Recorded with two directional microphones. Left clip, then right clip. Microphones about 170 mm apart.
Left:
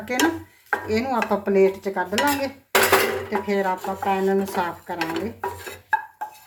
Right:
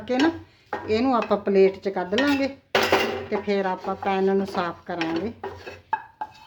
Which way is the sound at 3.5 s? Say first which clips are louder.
Left 1 dB; 40° right (ahead or behind).